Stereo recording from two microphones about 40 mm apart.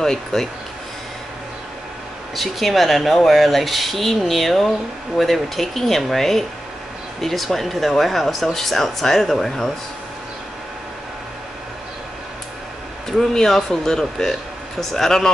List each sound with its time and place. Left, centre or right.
0.0 s speech: centre
2.3 s speech: centre
13.3 s speech: centre